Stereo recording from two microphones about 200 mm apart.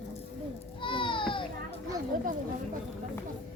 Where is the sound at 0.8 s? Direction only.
25° left (ahead or behind).